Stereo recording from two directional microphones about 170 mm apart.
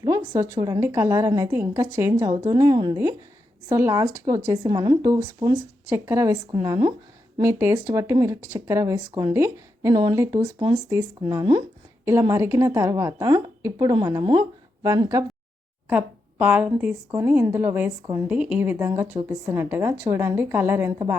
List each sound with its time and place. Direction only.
0.0 s a woman's voice: 20° right (ahead or behind)
15.9 s a woman's voice: 10° right (ahead or behind)